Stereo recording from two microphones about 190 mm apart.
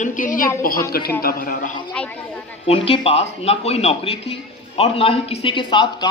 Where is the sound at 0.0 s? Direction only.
45° left (ahead or behind).